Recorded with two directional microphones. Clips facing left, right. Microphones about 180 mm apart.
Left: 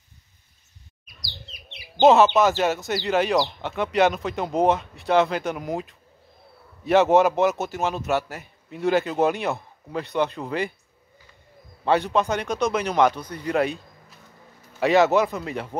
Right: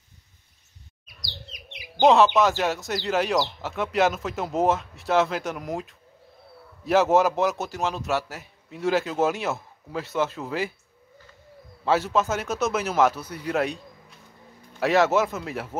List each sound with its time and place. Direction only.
1.0 s chirp: 20° right (ahead or behind)
2.0 s speech: centre (ahead or behind)
11.8 s speech: centre (ahead or behind)